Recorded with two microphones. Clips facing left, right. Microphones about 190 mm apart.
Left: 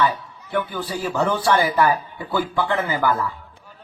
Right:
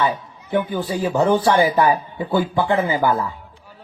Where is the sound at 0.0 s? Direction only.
15° right (ahead or behind).